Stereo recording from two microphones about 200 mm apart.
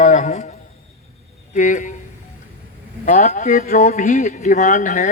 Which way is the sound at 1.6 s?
40° left (ahead or behind).